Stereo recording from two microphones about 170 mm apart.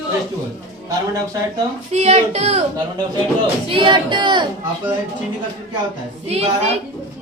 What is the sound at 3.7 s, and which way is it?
Speech, 30° right (ahead or behind).